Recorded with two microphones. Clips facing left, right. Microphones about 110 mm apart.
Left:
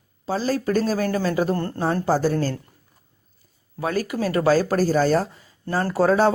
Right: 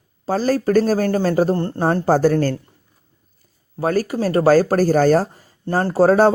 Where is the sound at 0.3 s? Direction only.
50° right (ahead or behind).